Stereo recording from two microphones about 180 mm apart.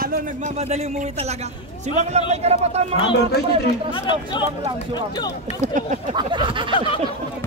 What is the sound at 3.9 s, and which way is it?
Speech, 30° left (ahead or behind).